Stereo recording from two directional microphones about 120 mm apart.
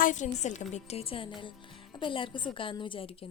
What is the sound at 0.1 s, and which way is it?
A woman's voice, 90° left.